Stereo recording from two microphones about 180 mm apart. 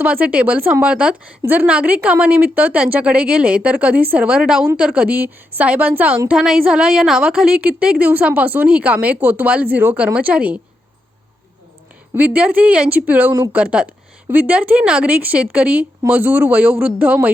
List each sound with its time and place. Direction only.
0.0 s a woman's voice: 10° right (ahead or behind)
12.1 s speech: 10° right (ahead or behind)